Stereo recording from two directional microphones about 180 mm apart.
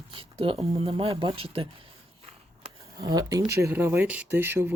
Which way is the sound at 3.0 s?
20° right (ahead or behind).